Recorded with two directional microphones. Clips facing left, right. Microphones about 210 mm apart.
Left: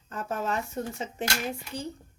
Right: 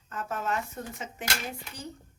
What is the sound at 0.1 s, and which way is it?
Speech, 30° left (ahead or behind).